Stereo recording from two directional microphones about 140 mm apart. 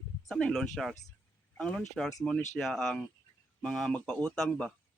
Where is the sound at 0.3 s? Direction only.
5° left (ahead or behind).